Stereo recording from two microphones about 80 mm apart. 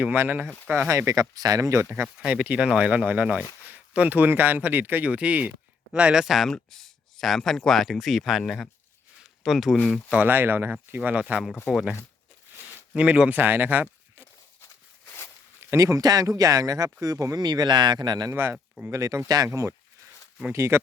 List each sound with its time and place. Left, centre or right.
0.0 s speech: right
0.9 s speech: right
2.2 s speech: centre
6.2 s speech: centre
10.1 s speech: right
12.9 s speech: centre
15.7 s speech: right
17.4 s speech: right
18.3 s speech: right